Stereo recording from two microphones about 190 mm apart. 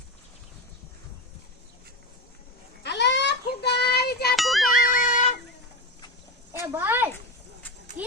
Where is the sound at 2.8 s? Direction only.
65° left (ahead or behind).